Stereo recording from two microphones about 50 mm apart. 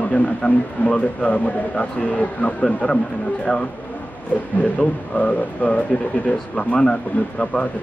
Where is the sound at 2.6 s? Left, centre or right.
Centre.